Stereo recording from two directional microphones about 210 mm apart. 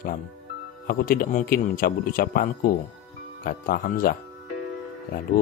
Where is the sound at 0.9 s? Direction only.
45° left (ahead or behind).